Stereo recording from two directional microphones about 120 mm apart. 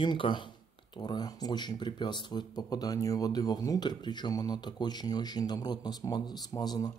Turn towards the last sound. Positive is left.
turn(degrees=35)  # may be behind; listen again after turning